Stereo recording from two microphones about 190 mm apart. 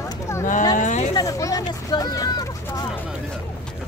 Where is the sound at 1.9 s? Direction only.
20° left (ahead or behind).